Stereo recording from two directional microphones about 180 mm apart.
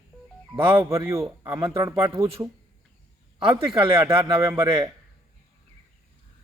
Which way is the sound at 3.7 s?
30° right (ahead or behind).